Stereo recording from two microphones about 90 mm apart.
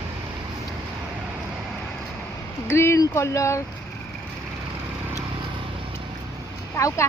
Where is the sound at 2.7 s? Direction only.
30° left (ahead or behind).